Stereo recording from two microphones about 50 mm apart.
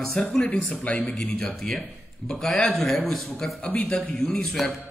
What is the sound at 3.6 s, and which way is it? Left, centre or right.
Speech, left.